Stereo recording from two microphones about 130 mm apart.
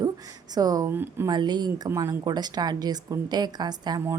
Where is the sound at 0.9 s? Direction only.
15° right (ahead or behind).